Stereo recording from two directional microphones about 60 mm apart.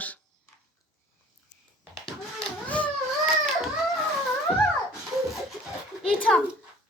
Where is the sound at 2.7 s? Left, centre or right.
Left.